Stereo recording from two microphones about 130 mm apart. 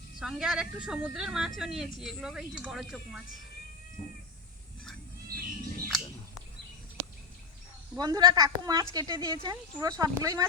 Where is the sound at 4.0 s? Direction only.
10° left (ahead or behind).